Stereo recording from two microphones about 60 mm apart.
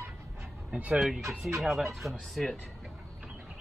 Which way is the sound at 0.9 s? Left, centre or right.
Centre.